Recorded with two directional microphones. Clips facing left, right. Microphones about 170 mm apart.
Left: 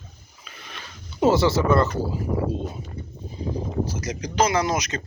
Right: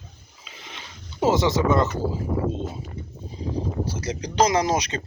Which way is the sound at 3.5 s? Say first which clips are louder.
Even; 30° right (ahead or behind).